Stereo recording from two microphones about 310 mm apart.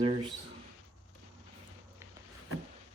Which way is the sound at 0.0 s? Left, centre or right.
Centre.